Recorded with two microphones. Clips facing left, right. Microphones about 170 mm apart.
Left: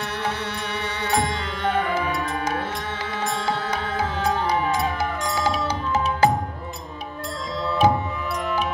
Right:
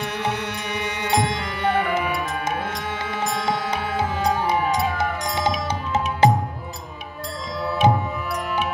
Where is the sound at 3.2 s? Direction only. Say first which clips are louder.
Right 1 dB; 15° right (ahead or behind).